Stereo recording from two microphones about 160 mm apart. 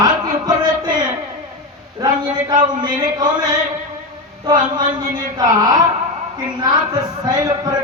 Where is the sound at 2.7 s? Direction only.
25° right (ahead or behind).